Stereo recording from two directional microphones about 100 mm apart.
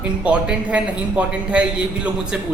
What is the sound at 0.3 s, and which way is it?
Speech, 10° right (ahead or behind).